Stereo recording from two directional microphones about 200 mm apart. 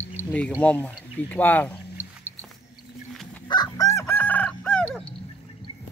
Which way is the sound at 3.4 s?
20° left (ahead or behind).